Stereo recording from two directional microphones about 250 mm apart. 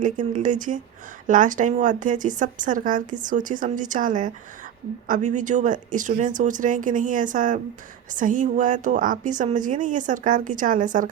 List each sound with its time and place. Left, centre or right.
0.0 s a woman's voice: right